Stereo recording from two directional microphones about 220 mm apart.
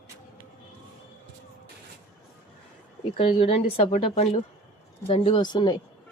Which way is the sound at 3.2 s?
25° left (ahead or behind).